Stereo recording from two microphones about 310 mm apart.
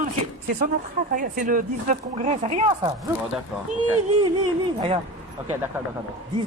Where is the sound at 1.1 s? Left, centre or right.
Right.